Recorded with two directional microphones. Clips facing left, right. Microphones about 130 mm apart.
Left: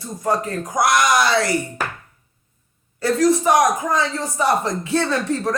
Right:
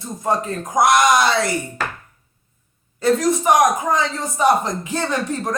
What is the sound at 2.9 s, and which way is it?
Speech, 20° right (ahead or behind).